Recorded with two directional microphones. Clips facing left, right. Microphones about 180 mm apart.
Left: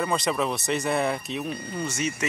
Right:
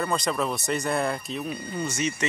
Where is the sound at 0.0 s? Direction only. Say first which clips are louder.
Left 1 dB; 5° left (ahead or behind).